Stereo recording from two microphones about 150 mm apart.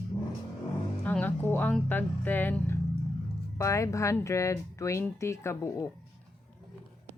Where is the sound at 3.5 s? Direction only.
20° left (ahead or behind).